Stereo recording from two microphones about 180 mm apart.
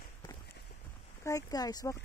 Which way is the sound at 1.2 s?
20° left (ahead or behind).